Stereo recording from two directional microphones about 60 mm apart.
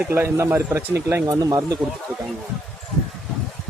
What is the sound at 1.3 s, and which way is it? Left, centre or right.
Speech, right.